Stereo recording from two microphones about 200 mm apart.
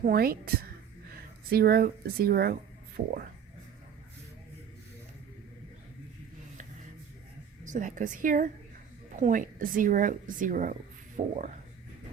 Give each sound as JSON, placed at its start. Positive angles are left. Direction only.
{"t": 0.0, "sound": "speech", "side_deg": -50}
{"t": 7.6, "sound": "speech", "side_deg": -40}